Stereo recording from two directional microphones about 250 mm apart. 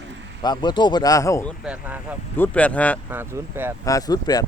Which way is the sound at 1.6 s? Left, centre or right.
Centre.